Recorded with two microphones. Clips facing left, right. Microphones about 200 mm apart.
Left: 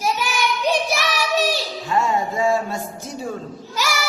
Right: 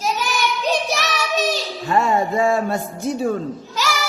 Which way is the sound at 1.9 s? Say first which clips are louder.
Right 3 dB; 60° right (ahead or behind).